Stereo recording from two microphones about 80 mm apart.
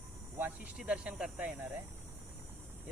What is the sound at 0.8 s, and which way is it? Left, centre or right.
Speech, centre.